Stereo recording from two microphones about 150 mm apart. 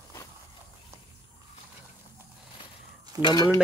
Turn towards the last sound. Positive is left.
turn(degrees=30)  # may be behind; listen again after turning